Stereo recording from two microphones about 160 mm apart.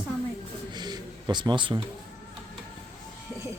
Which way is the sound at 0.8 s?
25° right (ahead or behind).